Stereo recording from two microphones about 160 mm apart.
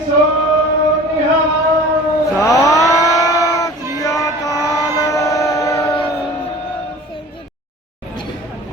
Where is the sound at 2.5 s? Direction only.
20° left (ahead or behind).